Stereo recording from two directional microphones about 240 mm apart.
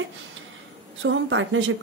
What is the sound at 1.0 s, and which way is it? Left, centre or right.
Speech, right.